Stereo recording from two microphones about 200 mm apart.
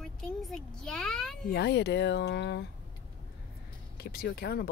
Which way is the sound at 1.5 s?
60° left (ahead or behind).